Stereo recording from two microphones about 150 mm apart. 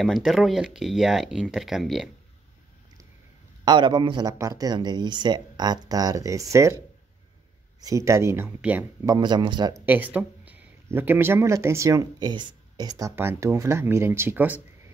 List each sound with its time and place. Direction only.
0.0 s speech: centre (ahead or behind)
3.6 s speech: 30° right (ahead or behind)
7.8 s speech: 20° right (ahead or behind)
9.0 s speech: 25° right (ahead or behind)
9.8 s speech: 10° right (ahead or behind)
13.1 s speech: 15° right (ahead or behind)